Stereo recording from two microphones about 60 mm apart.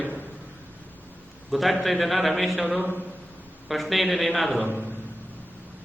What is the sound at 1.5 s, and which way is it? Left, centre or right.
A man's voice, centre.